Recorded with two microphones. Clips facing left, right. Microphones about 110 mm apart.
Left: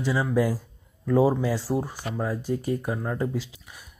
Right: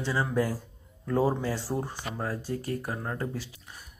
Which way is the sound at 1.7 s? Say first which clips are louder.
Left 5 dB; 10° left (ahead or behind).